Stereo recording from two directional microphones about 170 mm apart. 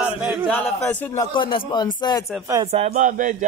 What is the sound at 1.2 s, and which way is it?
Speech, 30° left (ahead or behind).